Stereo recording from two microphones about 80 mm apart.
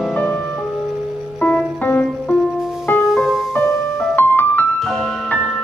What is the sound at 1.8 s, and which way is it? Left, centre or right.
Music, left.